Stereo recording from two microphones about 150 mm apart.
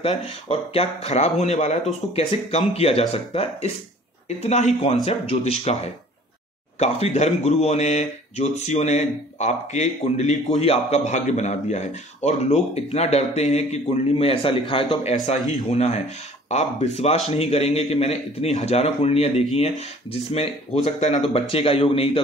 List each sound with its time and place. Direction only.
0.0 s speech: 40° left (ahead or behind)
6.8 s speech: 45° left (ahead or behind)